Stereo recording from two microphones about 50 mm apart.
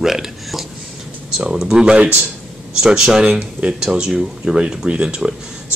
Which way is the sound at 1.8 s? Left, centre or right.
Right.